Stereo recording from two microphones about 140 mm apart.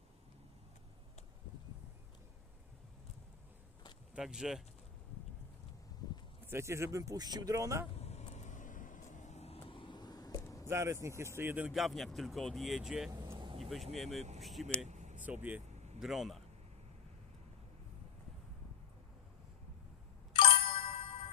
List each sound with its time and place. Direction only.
4.1 s speech: 5° right (ahead or behind)
6.0 s a sound: 30° left (ahead or behind)
6.5 s speech: 20° right (ahead or behind)
7.9 s vehicle: 50° left (ahead or behind); by 10.7 s 25° left (ahead or behind)
10.7 s speech: 20° right (ahead or behind); by 13.1 s 5° right (ahead or behind)
13.1 s vehicle: 25° right (ahead or behind)
13.3 s vehicle: 35° right (ahead or behind)
13.6 s speech: centre (ahead or behind)
14.2 s speech: 50° right (ahead or behind)
14.4 s speech: centre (ahead or behind)
14.8 s vehicle: 55° right (ahead or behind)
15.2 s speech: 10° right (ahead or behind)
20.5 s music: 40° left (ahead or behind)